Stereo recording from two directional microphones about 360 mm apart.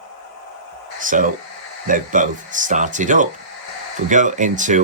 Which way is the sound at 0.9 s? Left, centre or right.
Right.